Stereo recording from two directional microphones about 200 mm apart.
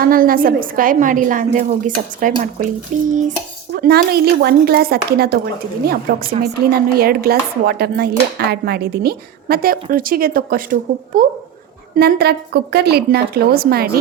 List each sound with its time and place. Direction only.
0.0 s speech: 45° right (ahead or behind)
3.1 s dishes: 40° right (ahead or behind)
3.7 s speech: 50° right (ahead or behind)